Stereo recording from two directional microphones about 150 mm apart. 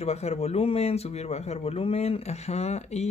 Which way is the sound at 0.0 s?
45° left (ahead or behind).